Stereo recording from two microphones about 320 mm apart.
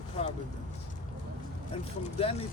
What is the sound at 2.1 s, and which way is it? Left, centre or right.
Speech, centre.